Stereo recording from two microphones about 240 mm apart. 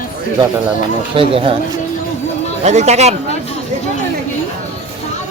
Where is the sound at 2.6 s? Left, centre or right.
Right.